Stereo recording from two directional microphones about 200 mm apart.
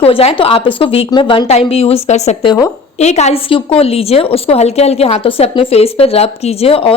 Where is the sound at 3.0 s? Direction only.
35° left (ahead or behind).